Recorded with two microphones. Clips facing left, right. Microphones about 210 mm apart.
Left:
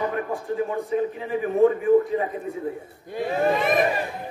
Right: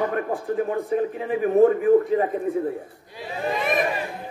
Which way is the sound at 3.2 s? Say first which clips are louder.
Left 8 dB; 50° left (ahead or behind).